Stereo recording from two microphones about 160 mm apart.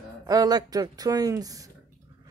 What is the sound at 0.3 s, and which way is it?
Speech, 25° right (ahead or behind).